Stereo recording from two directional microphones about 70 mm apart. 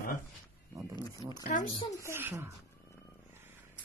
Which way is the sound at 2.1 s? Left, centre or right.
Right.